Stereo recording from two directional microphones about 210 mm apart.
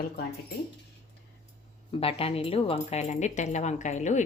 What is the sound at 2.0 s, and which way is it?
Speech, 25° left (ahead or behind).